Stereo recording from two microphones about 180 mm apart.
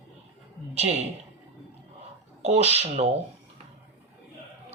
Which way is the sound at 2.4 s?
35° right (ahead or behind).